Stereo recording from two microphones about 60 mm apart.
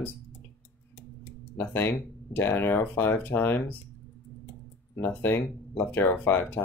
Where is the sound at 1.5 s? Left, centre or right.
Left.